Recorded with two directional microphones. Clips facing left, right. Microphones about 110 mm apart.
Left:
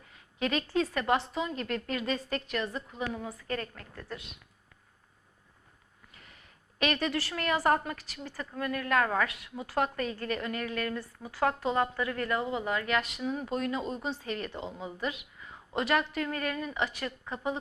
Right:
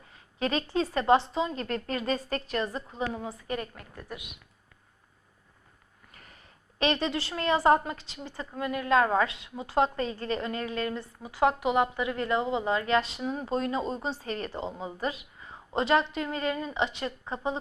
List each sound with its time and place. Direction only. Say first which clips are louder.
0.1 s a woman's voice: right 2 dB; 35° right (ahead or behind)
3.4 s a woman's voice: right 1 dB; 15° right (ahead or behind)
6.1 s a woman's voice: right 3 dB; 40° right (ahead or behind)